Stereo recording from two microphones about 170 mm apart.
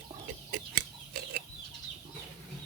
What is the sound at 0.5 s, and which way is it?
Chicken, 60° right (ahead or behind).